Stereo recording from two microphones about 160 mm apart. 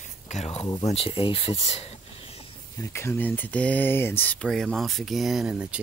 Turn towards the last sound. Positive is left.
turn(degrees=-5)  # may be behind; listen again after turning